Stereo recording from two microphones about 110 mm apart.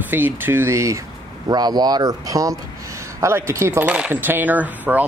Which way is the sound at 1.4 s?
40° right (ahead or behind).